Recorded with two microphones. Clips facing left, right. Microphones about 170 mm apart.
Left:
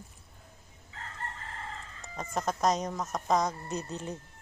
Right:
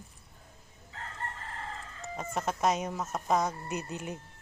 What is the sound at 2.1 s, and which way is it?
Speech, 5° right (ahead or behind).